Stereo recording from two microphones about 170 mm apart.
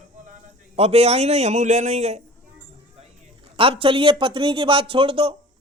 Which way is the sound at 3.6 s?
30° right (ahead or behind).